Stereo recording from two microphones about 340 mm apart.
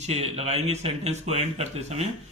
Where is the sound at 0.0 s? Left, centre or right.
Centre.